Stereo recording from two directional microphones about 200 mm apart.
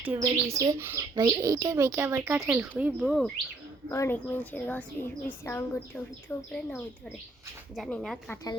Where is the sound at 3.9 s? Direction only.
10° left (ahead or behind).